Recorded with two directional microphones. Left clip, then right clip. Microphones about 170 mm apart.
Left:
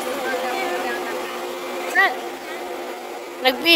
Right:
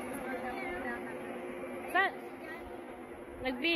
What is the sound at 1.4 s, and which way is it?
Vehicle, 50° left (ahead or behind).